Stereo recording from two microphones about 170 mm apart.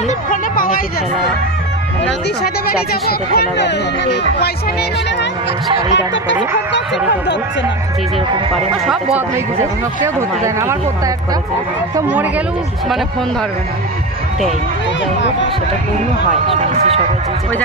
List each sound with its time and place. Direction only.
0.3 s a sound: 55° left (ahead or behind)
2.0 s speech: 65° left (ahead or behind); by 4.5 s 90° left
9.6 s speech: 15° right (ahead or behind)
11.9 s speech: 10° right (ahead or behind)
16.4 s speech: 35° right (ahead or behind)